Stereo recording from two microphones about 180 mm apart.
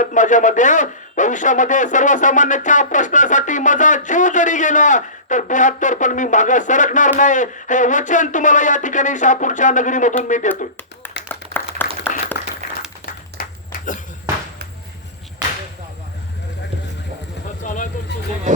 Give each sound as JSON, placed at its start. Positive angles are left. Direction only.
{"t": 0.0, "sound": "speech", "side_deg": 45}
{"t": 11.3, "sound": "clapping", "side_deg": 10}
{"t": 12.1, "sound": "applause", "side_deg": 45}
{"t": 13.4, "sound": "a sound", "side_deg": 55}
{"t": 17.6, "sound": "vehicle", "side_deg": 45}
{"t": 18.5, "sound": "music", "side_deg": -45}